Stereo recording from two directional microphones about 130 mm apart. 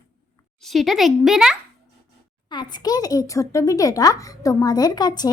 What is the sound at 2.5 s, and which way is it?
A child's voice, 35° left (ahead or behind).